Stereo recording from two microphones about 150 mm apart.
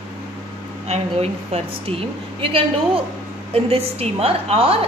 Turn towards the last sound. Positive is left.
turn(degrees=-40)  # may be behind; listen again after turning